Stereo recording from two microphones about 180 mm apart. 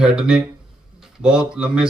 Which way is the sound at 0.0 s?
5° right (ahead or behind).